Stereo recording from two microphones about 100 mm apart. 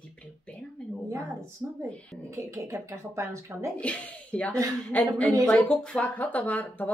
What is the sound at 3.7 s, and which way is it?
Speech, 15° left (ahead or behind).